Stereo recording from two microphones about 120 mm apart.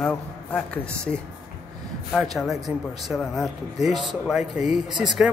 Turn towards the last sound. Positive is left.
turn(degrees=-5)  # may be behind; listen again after turning